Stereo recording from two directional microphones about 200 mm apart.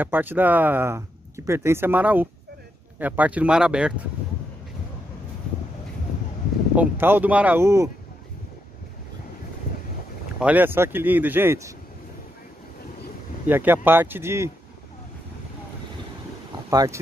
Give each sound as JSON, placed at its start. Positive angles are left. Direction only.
{"t": 0.0, "sound": "speech", "side_deg": -10}
{"t": 6.8, "sound": "speech", "side_deg": -10}
{"t": 10.4, "sound": "speech", "side_deg": -10}
{"t": 13.5, "sound": "speech", "side_deg": -10}
{"t": 16.7, "sound": "speech", "side_deg": -15}